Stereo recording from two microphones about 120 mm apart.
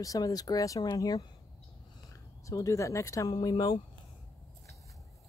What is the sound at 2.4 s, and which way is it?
Speech, 25° left (ahead or behind).